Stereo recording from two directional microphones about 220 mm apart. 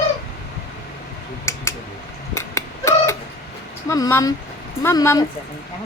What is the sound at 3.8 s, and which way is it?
Speech, 15° left (ahead or behind).